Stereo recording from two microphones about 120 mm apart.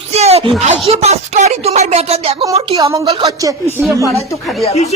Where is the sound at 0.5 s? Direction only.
65° right (ahead or behind).